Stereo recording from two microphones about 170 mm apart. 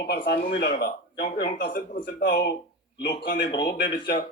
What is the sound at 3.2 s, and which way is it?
Speech, 90° left.